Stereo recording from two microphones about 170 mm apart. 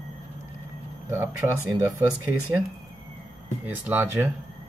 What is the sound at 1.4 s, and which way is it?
Speech, 25° right (ahead or behind).